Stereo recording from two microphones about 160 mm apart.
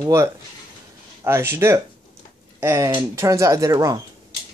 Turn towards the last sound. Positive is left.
turn(degrees=-20)  # may be behind; listen again after turning